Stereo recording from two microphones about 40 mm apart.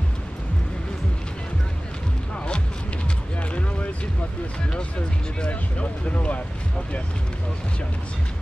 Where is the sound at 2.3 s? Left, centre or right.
Left.